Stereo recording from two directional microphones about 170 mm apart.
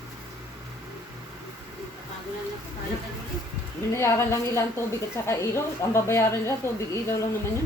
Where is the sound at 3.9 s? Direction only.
15° left (ahead or behind).